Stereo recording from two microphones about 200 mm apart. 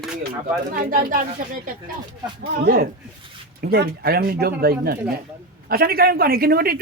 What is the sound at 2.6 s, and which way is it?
A man's voice, 45° right (ahead or behind).